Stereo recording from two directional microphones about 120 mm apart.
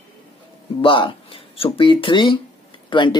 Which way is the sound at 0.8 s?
45° left (ahead or behind).